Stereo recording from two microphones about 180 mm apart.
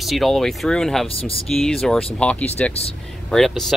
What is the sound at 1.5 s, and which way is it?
Speech, centre (ahead or behind).